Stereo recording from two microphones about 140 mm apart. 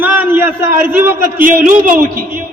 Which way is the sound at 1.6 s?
70° right (ahead or behind).